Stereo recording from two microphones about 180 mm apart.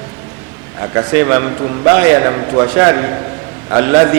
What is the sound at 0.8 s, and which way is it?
A man's voice, 15° right (ahead or behind).